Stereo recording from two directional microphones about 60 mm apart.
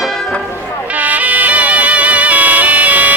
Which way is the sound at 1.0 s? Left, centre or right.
Right.